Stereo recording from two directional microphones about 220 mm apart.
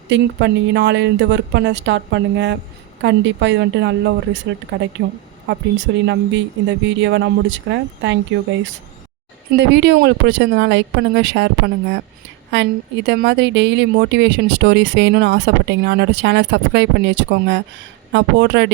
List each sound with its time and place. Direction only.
0.1 s speech: 55° right (ahead or behind)
4.7 s speech: 60° right (ahead or behind)
9.6 s speech: 50° right (ahead or behind)